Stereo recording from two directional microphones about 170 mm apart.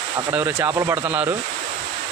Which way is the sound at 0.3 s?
15° right (ahead or behind).